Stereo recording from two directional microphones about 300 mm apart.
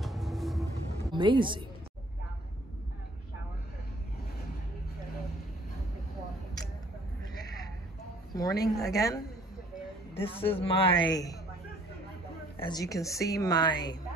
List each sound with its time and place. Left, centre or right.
0.0 s music: centre
1.1 s speech: centre
7.4 s a sound: centre
8.4 s a woman's voice: centre
12.5 s a woman's voice: centre